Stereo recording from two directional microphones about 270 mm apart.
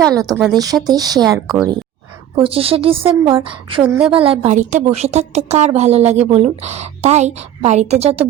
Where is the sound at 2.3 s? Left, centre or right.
Right.